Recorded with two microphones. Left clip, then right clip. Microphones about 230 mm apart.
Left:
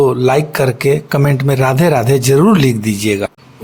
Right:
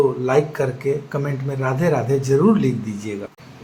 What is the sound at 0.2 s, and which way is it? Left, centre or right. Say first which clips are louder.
Speech: left 6 dB; left.